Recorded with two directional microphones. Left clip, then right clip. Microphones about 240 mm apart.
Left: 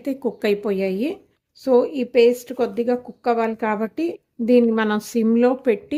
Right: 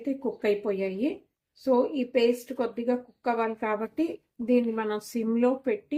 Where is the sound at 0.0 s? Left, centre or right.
Left.